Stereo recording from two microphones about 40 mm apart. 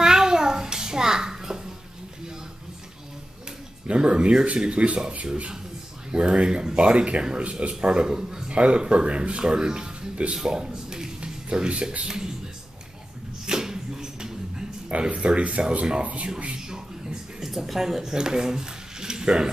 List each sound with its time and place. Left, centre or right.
0.0 s child singing: centre
3.8 s speech: right
6.1 s speech: right
8.5 s a man's voice: right
11.2 s music: right
12.0 s speech: centre
13.5 s a sound: centre
14.9 s speech: right
17.4 s speech: centre